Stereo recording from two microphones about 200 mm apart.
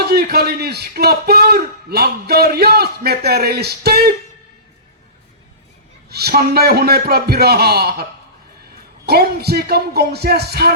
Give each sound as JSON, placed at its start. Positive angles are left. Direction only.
{"t": 0.1, "sound": "a man's voice", "side_deg": -50}
{"t": 6.1, "sound": "a man's voice", "side_deg": -50}
{"t": 9.0, "sound": "a man's voice", "side_deg": -55}